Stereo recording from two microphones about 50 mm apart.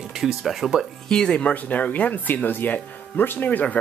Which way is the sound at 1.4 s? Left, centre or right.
Left.